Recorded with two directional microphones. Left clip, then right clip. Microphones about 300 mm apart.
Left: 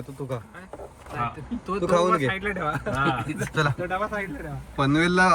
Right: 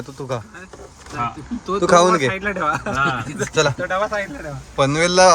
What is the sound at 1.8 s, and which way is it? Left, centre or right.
Speech, right.